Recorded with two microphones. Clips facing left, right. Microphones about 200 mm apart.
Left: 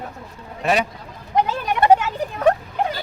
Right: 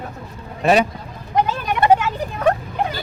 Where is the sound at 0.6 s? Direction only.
30° right (ahead or behind).